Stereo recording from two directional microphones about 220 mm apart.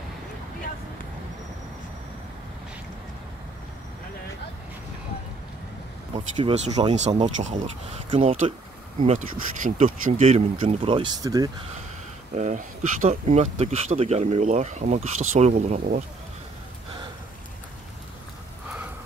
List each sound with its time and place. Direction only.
6.1 s speech: 30° right (ahead or behind)
12.4 s speech: 35° right (ahead or behind)